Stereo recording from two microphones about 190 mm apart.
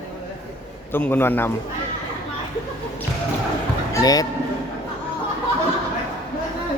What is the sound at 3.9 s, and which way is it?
Speech, 20° left (ahead or behind).